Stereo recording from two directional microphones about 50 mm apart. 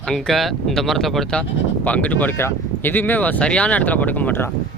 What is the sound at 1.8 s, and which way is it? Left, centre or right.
Speech, left.